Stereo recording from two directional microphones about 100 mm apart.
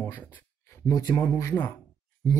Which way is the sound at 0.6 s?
35° left (ahead or behind).